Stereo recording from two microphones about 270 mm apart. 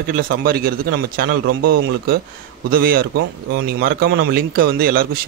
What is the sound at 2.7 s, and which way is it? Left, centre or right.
Speech, right.